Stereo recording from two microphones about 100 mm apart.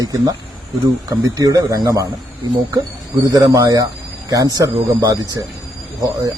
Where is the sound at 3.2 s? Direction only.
35° right (ahead or behind).